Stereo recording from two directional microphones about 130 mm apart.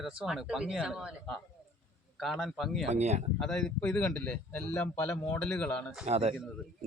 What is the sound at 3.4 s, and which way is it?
Speech, 5° left (ahead or behind).